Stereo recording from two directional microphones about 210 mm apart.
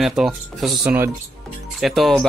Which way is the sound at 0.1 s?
Centre (ahead or behind).